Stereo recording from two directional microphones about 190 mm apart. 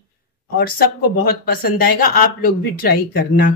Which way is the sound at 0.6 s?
55° left (ahead or behind).